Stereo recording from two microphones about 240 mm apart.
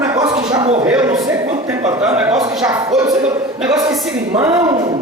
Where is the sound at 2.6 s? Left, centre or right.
Centre.